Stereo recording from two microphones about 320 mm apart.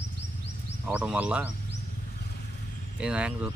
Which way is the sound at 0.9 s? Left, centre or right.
Centre.